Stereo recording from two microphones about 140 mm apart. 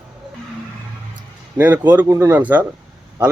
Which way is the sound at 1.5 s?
15° right (ahead or behind).